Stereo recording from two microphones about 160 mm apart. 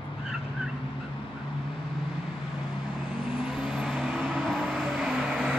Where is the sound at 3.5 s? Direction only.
5° right (ahead or behind).